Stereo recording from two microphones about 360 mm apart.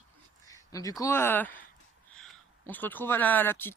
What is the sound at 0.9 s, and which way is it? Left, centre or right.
Speech, centre.